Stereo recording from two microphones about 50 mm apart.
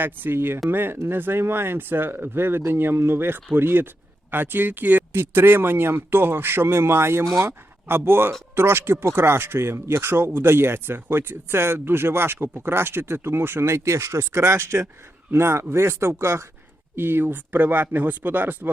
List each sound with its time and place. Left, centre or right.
0.0 s speech: right
7.4 s speech: right
16.9 s speech: right